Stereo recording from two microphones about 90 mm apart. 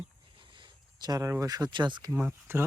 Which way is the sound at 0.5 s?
55° right (ahead or behind).